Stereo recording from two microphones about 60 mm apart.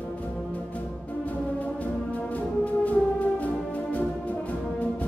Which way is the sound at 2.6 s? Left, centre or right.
Left.